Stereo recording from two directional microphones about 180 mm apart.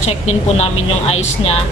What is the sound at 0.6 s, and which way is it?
Speech, 35° left (ahead or behind).